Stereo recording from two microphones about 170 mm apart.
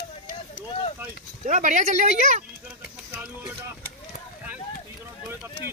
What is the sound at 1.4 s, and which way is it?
Speech, 45° right (ahead or behind).